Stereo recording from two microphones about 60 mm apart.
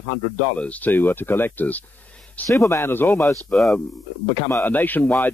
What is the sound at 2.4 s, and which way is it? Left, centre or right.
Speech, left.